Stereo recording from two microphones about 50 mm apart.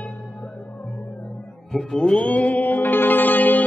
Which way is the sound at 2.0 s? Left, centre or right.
Left.